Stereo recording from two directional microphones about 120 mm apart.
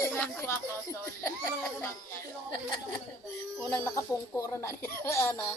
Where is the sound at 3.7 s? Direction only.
20° left (ahead or behind).